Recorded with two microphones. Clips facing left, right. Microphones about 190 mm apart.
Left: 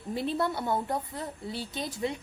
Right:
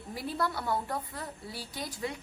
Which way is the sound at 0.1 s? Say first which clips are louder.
Left 4 dB; 25° left (ahead or behind).